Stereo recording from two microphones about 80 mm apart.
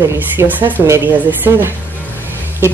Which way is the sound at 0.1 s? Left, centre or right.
Right.